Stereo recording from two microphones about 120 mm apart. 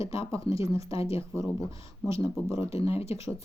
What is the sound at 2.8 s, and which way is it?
Speech, 55° left (ahead or behind).